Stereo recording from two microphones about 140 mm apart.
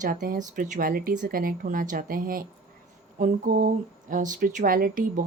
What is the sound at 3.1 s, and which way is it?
Speech, 75° right (ahead or behind).